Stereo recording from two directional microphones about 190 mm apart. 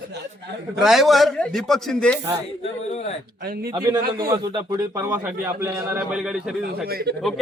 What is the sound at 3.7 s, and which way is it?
A man's voice, 20° right (ahead or behind).